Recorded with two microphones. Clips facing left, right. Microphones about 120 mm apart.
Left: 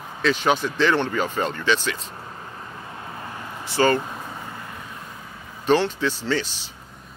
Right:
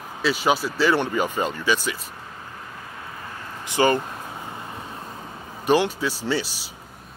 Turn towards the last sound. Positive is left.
turn(degrees=-10)  # may be behind; listen again after turning